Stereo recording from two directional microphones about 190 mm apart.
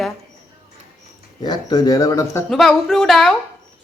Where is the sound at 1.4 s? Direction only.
20° left (ahead or behind).